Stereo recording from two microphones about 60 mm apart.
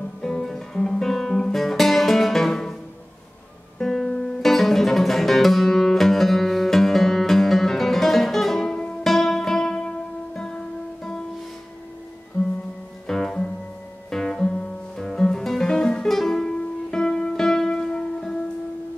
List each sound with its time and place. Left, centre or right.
0.2 s guitar: centre
3.7 s music: centre
13.0 s music: centre